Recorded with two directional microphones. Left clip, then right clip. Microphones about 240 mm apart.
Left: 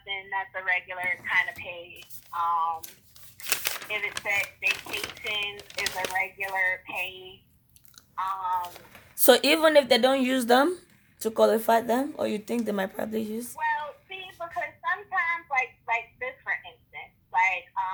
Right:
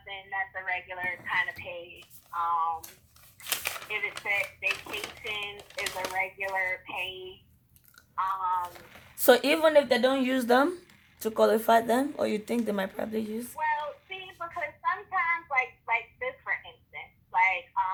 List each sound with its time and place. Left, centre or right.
0.3 s speech: left
8.1 s speech: left
9.1 s speech: centre
13.6 s child singing: left